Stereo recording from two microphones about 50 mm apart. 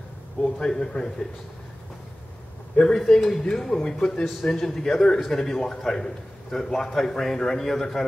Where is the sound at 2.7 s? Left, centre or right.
Centre.